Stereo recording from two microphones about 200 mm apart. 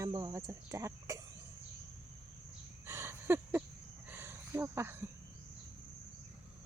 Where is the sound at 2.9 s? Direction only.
10° right (ahead or behind).